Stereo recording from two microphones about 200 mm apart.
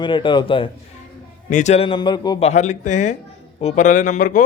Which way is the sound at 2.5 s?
35° left (ahead or behind).